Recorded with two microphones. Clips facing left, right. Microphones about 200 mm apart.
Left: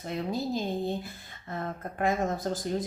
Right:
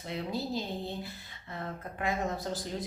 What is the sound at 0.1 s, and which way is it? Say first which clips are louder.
Speech: left 3 dB; 50° left (ahead or behind).